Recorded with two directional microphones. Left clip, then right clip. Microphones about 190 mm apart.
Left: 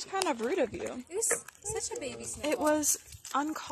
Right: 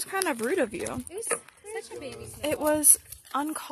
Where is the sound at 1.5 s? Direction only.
50° left (ahead or behind).